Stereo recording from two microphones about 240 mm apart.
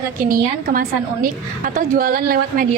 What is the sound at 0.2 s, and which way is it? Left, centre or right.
A woman's voice, right.